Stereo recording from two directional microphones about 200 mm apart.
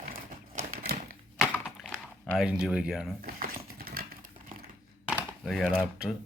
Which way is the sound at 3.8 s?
50° right (ahead or behind).